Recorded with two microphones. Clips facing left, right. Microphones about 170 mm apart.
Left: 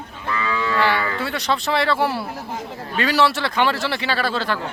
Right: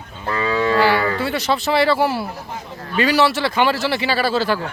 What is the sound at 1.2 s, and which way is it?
Speech, centre (ahead or behind).